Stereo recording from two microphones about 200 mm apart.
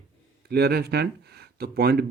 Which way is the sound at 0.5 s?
55° right (ahead or behind).